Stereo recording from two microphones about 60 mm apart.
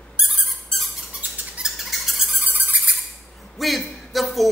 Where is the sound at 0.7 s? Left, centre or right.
Centre.